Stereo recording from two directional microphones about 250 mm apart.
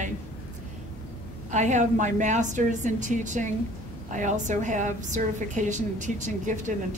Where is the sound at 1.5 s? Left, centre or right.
Right.